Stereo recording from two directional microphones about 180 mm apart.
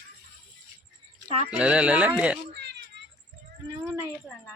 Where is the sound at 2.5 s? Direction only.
70° right (ahead or behind).